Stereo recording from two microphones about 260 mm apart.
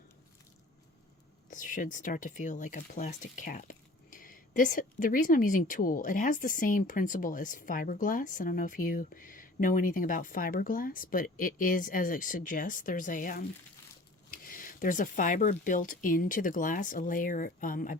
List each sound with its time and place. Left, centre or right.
1.5 s speech: left